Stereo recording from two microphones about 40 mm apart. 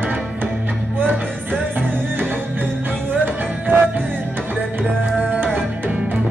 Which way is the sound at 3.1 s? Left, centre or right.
Right.